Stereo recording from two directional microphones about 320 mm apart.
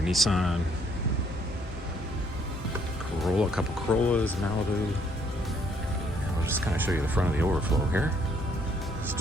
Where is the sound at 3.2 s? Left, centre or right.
Centre.